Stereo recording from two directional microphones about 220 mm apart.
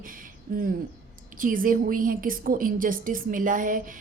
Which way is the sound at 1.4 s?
40° right (ahead or behind).